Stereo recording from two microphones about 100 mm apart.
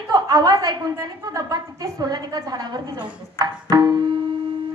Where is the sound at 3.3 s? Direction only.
45° right (ahead or behind).